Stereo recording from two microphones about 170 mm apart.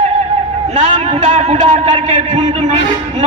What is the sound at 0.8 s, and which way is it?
A man's voice, 40° right (ahead or behind).